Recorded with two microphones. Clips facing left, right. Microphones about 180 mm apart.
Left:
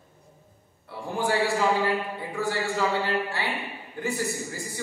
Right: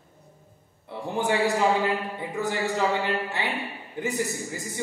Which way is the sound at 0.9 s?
20° right (ahead or behind).